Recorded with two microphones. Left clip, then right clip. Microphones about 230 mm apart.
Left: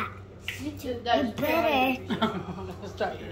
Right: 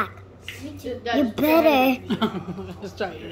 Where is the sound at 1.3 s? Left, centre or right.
Right.